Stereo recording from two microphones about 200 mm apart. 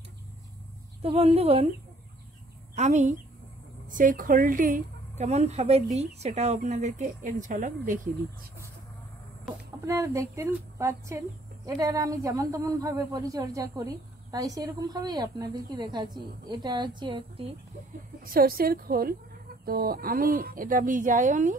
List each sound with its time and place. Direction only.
1.0 s a woman's voice: 30° right (ahead or behind)
2.7 s speech: 35° right (ahead or behind)
9.8 s speech: 15° right (ahead or behind)
18.2 s speech: 45° right (ahead or behind)